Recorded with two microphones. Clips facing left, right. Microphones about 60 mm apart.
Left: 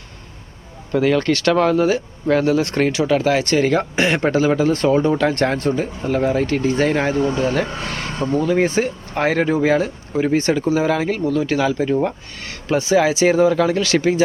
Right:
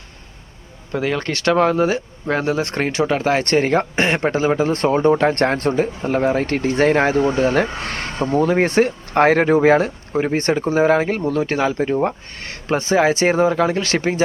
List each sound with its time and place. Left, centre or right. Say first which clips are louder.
0.9 s speech: left 5 dB; centre
1.3 s speech: left 1 dB; right
4.7 s speech: right 1 dB; right
8.6 s speech: right 3 dB; right
13.8 s speech: left 3 dB; right